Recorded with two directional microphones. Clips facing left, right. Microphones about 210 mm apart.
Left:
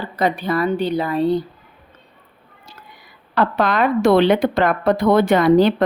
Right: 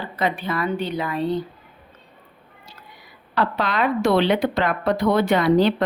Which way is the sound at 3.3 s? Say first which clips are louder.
Left 4 dB; 45° left (ahead or behind).